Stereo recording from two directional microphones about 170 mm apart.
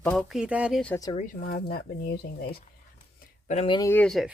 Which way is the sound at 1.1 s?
55° left (ahead or behind).